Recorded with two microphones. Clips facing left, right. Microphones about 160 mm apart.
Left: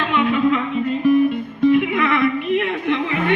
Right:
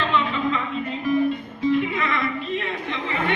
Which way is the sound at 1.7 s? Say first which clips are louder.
Left 6 dB; 60° left (ahead or behind).